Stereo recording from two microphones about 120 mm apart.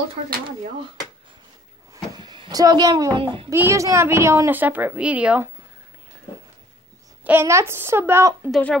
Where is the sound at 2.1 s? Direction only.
40° right (ahead or behind).